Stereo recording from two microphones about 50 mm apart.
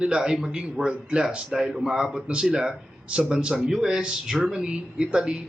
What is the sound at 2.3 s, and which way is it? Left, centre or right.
Speech, right.